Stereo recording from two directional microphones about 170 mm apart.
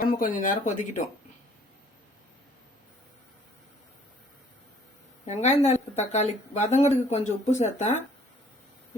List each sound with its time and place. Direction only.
0.0 s speech: 55° left (ahead or behind)
5.2 s a woman's voice: 40° left (ahead or behind)